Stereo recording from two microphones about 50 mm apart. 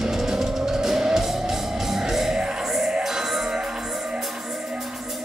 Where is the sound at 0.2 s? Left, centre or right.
Centre.